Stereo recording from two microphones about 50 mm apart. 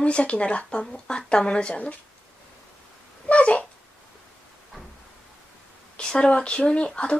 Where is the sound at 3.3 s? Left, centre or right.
Left.